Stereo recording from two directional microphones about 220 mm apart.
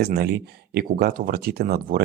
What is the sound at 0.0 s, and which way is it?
Speech, 45° right (ahead or behind).